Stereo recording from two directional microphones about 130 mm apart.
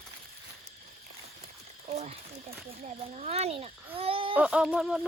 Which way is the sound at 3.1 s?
55° right (ahead or behind).